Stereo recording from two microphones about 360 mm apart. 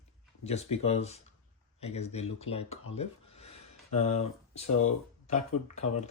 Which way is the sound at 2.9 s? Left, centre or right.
Centre.